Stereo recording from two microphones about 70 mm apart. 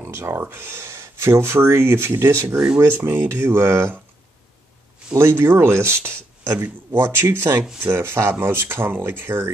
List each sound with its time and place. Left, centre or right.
0.0 s speech: right
2.5 s speech: centre
2.8 s speech: right
5.1 s speech: right